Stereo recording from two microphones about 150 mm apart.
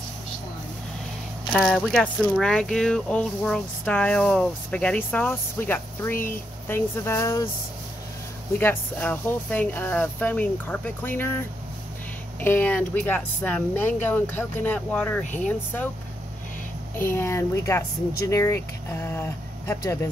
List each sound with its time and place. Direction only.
1.5 s speech: centre (ahead or behind); by 7.4 s 20° left (ahead or behind)
8.5 s speech: 10° left (ahead or behind)
17.1 s speech: 15° left (ahead or behind)